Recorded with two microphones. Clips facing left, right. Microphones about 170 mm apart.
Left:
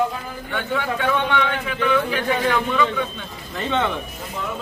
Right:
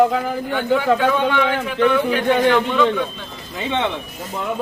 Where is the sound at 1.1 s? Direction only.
5° right (ahead or behind).